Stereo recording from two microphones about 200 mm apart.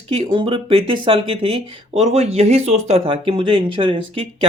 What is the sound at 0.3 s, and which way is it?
Speech, 25° right (ahead or behind).